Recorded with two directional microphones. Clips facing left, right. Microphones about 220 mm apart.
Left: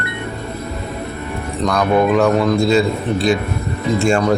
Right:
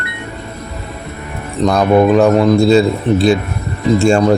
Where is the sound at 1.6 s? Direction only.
25° right (ahead or behind).